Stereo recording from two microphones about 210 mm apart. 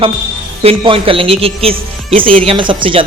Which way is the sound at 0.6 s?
30° right (ahead or behind).